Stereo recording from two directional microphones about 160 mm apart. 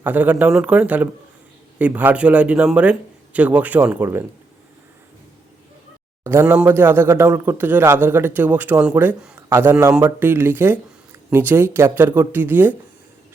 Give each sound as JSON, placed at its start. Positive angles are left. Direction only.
{"t": 0.0, "sound": "a man's voice", "side_deg": -10}
{"t": 6.2, "sound": "a man's voice", "side_deg": -15}